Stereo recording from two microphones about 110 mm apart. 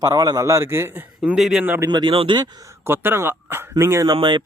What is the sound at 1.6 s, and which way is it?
Speech, 20° right (ahead or behind).